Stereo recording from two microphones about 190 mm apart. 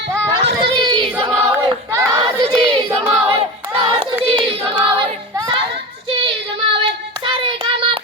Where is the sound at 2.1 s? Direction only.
25° right (ahead or behind).